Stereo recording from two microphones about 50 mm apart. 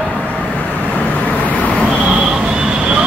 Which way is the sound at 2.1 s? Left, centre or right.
Centre.